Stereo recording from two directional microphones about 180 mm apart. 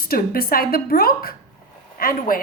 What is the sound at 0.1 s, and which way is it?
A woman's voice, 55° left (ahead or behind).